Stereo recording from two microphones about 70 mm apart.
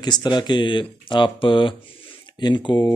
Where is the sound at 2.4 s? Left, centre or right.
Left.